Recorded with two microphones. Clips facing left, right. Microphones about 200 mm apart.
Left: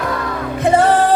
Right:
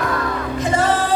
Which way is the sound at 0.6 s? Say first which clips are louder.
Left 7 dB; 60° left (ahead or behind).